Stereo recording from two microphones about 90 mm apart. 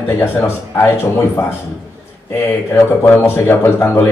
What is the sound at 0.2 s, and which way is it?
A man's voice, 25° left (ahead or behind).